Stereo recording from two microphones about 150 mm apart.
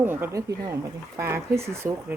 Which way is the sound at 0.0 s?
15° right (ahead or behind).